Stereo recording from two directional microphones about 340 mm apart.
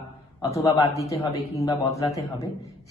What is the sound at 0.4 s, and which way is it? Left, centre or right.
A man's voice, centre.